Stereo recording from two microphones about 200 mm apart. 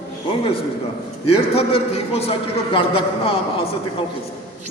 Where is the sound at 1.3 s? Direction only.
30° left (ahead or behind).